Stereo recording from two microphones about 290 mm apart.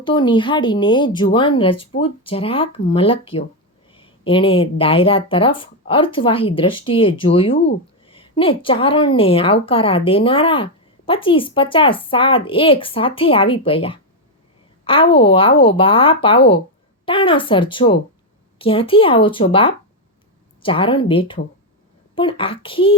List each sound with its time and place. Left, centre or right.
0.0 s a woman's voice: centre